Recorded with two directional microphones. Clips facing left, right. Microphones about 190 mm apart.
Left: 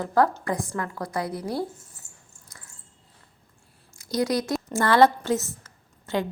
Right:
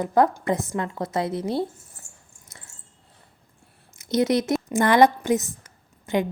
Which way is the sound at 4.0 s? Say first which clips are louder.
Right 4 dB; 20° right (ahead or behind).